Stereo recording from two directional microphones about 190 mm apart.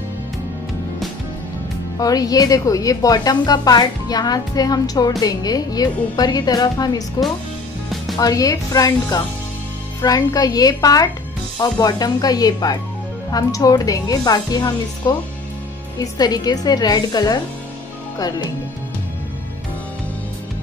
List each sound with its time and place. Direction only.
2.0 s a woman's voice: 20° left (ahead or behind)
8.2 s a woman's voice: 20° left (ahead or behind)